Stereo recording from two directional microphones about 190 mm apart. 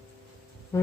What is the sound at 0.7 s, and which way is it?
Speech, 15° left (ahead or behind).